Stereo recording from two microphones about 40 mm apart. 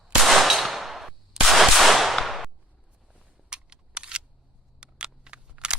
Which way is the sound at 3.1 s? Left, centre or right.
Right.